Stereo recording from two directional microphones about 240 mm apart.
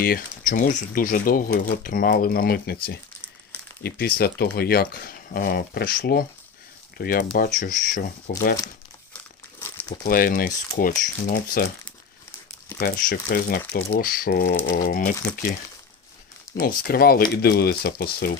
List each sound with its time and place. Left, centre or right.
0.0 s speech: left
3.8 s speech: left
10.0 s speech: left
12.8 s speech: left
16.6 s speech: left